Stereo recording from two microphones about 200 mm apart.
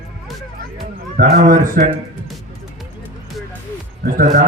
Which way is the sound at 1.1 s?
45° right (ahead or behind).